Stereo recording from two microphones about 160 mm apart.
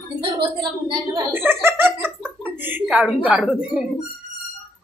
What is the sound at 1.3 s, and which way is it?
A woman's voice, 15° right (ahead or behind).